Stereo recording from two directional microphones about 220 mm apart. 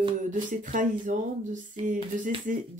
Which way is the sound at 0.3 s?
35° right (ahead or behind).